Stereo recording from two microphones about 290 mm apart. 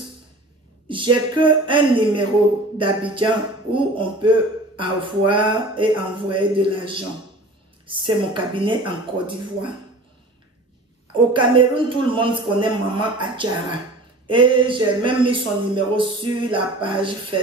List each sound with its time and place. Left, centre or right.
0.8 s speech: centre
11.3 s speech: centre